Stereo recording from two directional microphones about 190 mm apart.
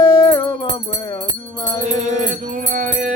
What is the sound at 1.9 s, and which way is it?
Music, 40° right (ahead or behind).